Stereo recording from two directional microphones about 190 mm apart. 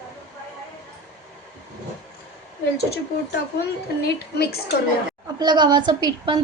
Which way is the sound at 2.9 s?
55° left (ahead or behind).